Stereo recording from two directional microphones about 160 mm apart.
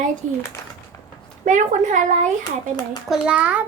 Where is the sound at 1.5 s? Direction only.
50° right (ahead or behind).